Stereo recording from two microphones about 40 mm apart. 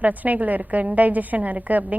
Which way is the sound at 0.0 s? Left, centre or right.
Right.